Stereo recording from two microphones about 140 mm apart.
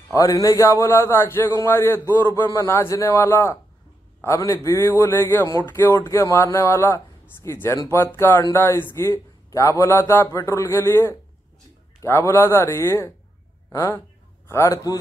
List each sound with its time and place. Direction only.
0.1 s speech: 25° left (ahead or behind)